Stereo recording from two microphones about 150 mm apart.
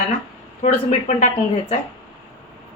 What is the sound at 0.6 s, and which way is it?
Speech, 50° left (ahead or behind).